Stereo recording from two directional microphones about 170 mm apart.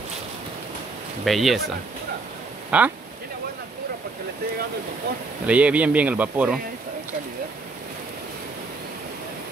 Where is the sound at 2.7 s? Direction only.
5° right (ahead or behind).